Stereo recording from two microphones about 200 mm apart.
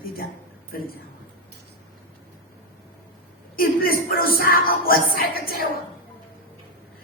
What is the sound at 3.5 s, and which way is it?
Speech, 45° left (ahead or behind).